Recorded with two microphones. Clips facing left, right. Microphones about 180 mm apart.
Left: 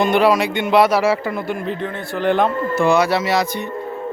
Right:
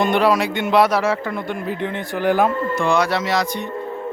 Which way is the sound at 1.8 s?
10° right (ahead or behind).